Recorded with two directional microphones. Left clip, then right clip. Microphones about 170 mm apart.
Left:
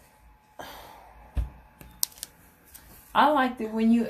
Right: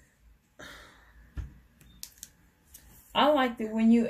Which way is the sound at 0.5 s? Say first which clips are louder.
Left 5 dB; 10° right (ahead or behind).